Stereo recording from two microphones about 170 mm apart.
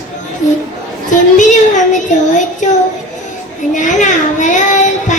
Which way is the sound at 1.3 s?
45° left (ahead or behind).